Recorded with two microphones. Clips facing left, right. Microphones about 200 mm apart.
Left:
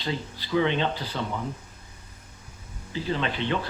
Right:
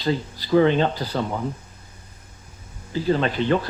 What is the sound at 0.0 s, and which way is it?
Speech, 40° right (ahead or behind).